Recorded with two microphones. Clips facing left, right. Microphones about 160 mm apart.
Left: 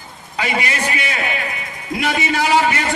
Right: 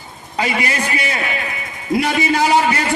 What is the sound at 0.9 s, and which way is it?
Speech, 35° right (ahead or behind).